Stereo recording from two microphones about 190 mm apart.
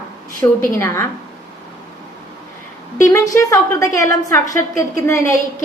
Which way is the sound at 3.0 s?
15° left (ahead or behind).